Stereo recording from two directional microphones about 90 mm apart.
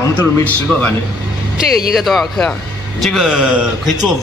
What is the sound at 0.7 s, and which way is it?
Speech, 15° left (ahead or behind).